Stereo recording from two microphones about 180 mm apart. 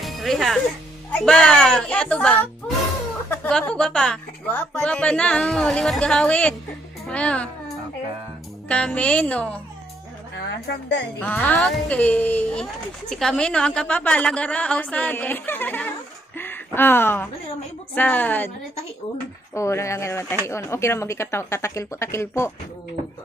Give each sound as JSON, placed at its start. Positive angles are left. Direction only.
{"t": 0.0, "sound": "music", "side_deg": 0}
{"t": 1.1, "sound": "a woman's voice", "side_deg": 5}
{"t": 10.3, "sound": "a woman's voice", "side_deg": 70}
{"t": 11.1, "sound": "a woman's voice", "side_deg": 10}
{"t": 19.5, "sound": "a woman's voice", "side_deg": 15}